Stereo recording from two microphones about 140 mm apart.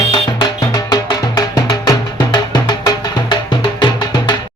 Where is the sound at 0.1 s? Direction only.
30° left (ahead or behind).